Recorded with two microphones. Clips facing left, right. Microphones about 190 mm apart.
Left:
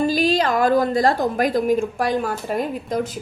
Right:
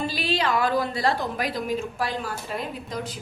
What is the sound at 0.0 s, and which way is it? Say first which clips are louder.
A woman's voice: left 8 dB; 45° left (ahead or behind).